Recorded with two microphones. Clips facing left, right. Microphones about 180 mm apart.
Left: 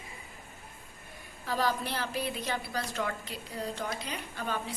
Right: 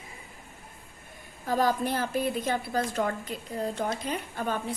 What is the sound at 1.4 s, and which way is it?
A woman's voice, 50° right (ahead or behind).